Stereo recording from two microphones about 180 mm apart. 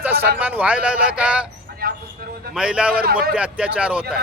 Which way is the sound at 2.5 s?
5° right (ahead or behind).